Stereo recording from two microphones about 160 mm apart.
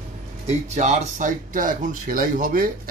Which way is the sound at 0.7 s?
50° right (ahead or behind).